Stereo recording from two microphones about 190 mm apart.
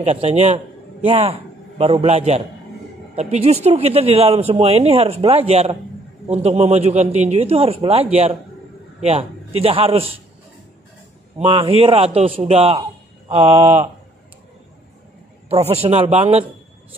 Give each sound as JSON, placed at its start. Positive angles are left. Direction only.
{"t": 0.0, "sound": "speech", "side_deg": -35}
{"t": 11.3, "sound": "speech", "side_deg": -30}
{"t": 13.6, "sound": "speech", "side_deg": -10}
{"t": 15.7, "sound": "speech", "side_deg": -30}